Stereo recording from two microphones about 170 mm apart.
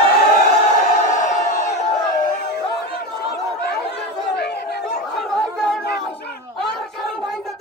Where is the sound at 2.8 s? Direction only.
75° left (ahead or behind).